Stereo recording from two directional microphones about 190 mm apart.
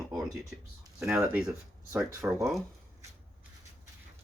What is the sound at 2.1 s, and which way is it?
Speech, 15° right (ahead or behind).